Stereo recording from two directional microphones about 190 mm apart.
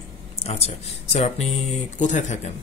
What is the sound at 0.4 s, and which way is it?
Speech, 30° left (ahead or behind).